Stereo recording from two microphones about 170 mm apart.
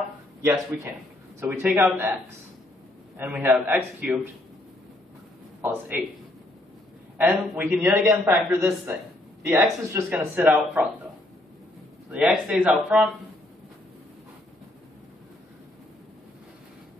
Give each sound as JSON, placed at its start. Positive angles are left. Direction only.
{"t": 0.4, "sound": "a man's voice", "side_deg": -15}
{"t": 3.2, "sound": "a man's voice", "side_deg": -10}
{"t": 5.6, "sound": "a man's voice", "side_deg": -10}
{"t": 7.2, "sound": "a man's voice", "side_deg": -10}
{"t": 12.1, "sound": "speech", "side_deg": -5}